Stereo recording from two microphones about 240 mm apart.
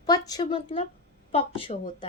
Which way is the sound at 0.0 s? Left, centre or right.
Centre.